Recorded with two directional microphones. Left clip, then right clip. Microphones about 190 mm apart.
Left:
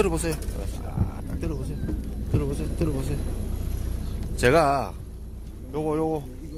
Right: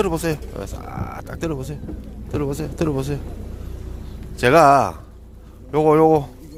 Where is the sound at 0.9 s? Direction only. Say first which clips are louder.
Right 5 dB; 60° right (ahead or behind).